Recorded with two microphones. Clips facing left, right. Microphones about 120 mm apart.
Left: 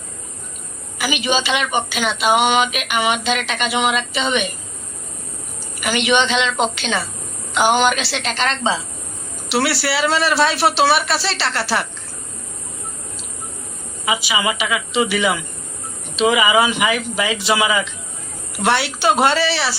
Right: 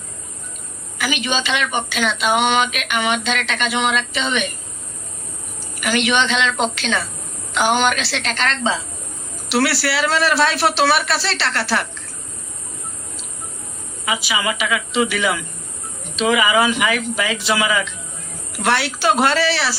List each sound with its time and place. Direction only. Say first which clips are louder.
0.9 s speech: left 2 dB; 5° left (ahead or behind)
5.8 s speech: left 1 dB; centre (ahead or behind)
14.0 s speech: left 2 dB; 5° left (ahead or behind)